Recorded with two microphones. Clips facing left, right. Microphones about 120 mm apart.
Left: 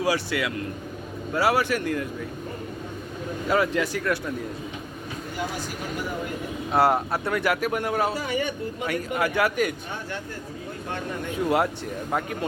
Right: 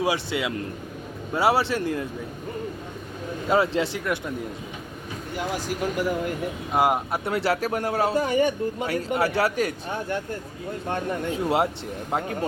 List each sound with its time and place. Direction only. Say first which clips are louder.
0.0 s a man's voice: even; 20° right (ahead or behind)
3.5 s a man's voice: right 1 dB; 25° right (ahead or behind)
6.7 s speech: left 1 dB; 15° right (ahead or behind)
7.3 s speech: right 1 dB; 30° right (ahead or behind)
8.1 s speech: right 6 dB; 45° right (ahead or behind)
11.4 s a man's voice: left 1 dB; 25° right (ahead or behind)